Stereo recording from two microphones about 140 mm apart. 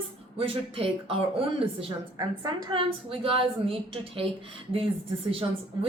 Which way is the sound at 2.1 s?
30° right (ahead or behind).